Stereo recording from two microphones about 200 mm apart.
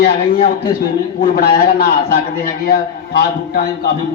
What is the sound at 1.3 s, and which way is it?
A man's voice, 45° left (ahead or behind).